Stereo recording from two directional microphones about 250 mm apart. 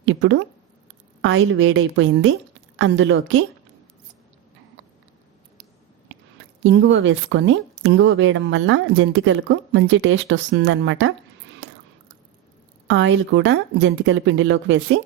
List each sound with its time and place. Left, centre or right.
0.0 s speech: right
6.6 s speech: right
12.9 s speech: right